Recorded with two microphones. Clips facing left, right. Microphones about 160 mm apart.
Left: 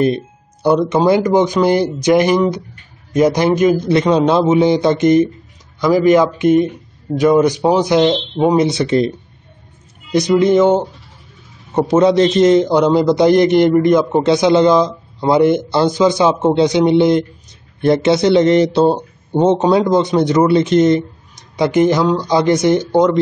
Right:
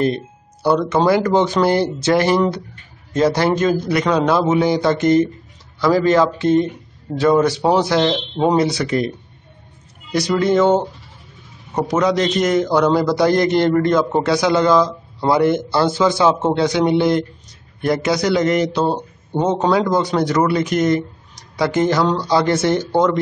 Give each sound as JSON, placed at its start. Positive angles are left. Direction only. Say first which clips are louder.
{"t": 0.0, "sound": "a man's voice", "louder": "left 3 dB", "side_deg": 20}
{"t": 10.1, "sound": "a man's voice", "louder": "left 4 dB", "side_deg": 20}
{"t": 11.7, "sound": "a man's voice", "louder": "left 6 dB", "side_deg": 25}